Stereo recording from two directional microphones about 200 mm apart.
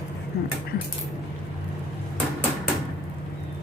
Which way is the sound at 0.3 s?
50° left (ahead or behind).